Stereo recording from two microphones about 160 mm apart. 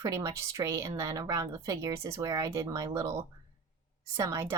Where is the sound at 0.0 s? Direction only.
20° right (ahead or behind).